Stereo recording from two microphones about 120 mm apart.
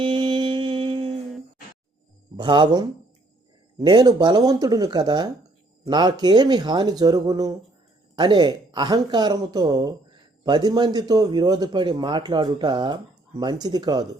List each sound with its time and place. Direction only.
0.0 s music: 45° right (ahead or behind)
2.3 s speech: 40° right (ahead or behind)